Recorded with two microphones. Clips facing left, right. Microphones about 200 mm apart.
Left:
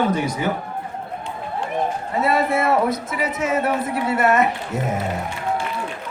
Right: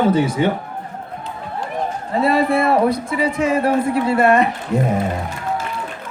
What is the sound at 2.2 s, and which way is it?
A man's voice, 30° right (ahead or behind).